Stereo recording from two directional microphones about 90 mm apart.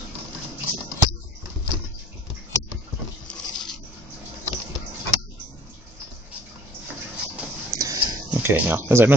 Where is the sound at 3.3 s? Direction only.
5° left (ahead or behind).